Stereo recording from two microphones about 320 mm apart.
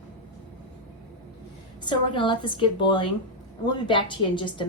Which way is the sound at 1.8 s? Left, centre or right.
Centre.